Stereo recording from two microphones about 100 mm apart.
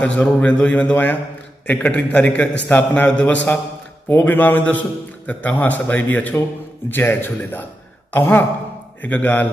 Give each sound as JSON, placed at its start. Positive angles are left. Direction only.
{"t": 0.0, "sound": "a man's voice", "side_deg": 10}